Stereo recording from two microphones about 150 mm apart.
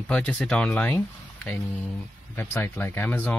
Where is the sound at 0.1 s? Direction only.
5° left (ahead or behind).